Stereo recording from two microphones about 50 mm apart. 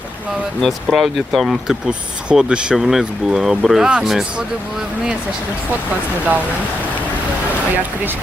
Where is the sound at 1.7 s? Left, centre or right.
Right.